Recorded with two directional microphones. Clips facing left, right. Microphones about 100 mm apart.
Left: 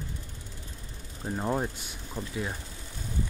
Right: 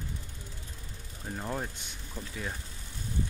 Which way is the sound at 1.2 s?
25° left (ahead or behind).